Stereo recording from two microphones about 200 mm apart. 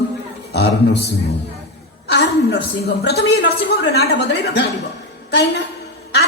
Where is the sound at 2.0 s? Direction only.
55° left (ahead or behind).